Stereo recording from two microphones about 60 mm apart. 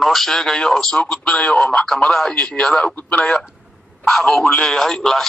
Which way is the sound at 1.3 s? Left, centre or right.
Left.